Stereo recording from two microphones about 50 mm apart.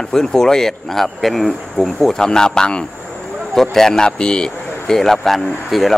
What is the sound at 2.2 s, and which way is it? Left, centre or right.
Speech, centre.